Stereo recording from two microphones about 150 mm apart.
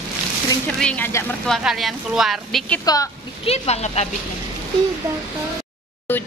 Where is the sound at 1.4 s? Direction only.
Centre (ahead or behind).